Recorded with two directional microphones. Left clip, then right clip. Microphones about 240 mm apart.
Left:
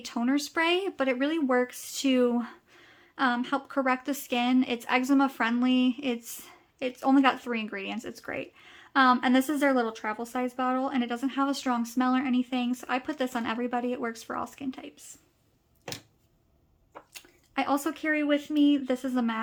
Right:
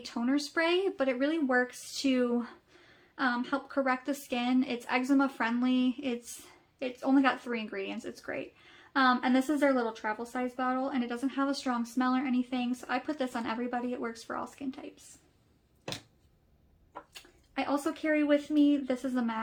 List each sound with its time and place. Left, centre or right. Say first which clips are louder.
0.0 s speech: left 3 dB; left
17.5 s speech: left 4 dB; left